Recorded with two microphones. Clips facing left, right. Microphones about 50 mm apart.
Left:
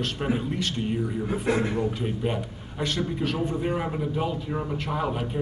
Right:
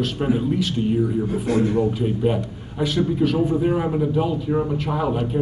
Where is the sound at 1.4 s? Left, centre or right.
Left.